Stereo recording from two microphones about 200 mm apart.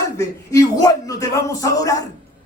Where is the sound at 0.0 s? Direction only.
15° left (ahead or behind).